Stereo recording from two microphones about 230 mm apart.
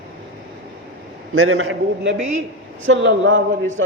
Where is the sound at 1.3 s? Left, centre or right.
Right.